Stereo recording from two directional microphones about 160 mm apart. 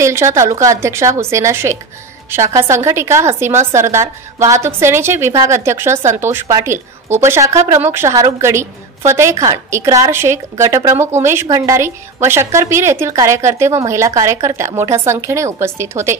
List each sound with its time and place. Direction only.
0.0 s a woman's voice: 20° right (ahead or behind)